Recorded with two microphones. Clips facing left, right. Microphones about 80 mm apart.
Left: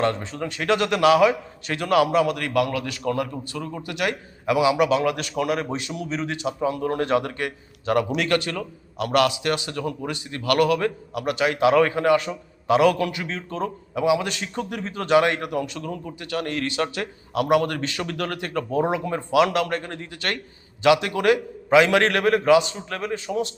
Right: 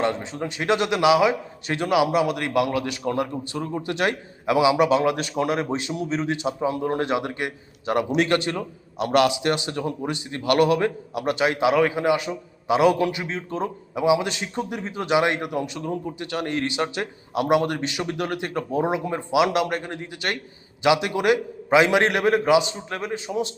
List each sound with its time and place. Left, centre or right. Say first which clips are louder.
0.0 s a man's voice: left 1 dB; centre
11.7 s a man's voice: left 2 dB; centre